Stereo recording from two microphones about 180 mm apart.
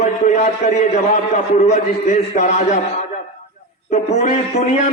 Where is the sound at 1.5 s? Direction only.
35° left (ahead or behind).